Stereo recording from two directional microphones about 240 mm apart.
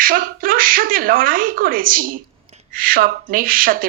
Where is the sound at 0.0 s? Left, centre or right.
Right.